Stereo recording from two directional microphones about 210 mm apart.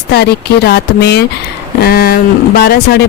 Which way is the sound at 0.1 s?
50° left (ahead or behind).